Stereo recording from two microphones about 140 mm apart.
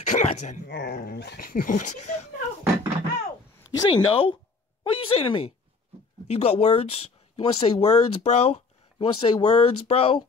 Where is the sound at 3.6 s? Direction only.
35° left (ahead or behind).